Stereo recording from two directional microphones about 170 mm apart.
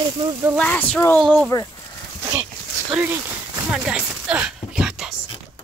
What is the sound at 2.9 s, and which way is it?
Speech, 10° right (ahead or behind).